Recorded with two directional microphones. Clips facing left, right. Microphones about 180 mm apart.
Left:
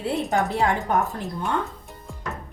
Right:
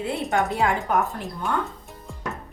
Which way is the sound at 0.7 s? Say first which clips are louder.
Even; centre (ahead or behind).